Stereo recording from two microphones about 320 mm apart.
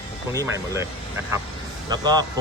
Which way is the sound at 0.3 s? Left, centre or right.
Centre.